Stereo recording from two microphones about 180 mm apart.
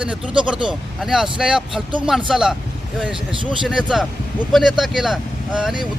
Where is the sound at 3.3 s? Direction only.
30° right (ahead or behind).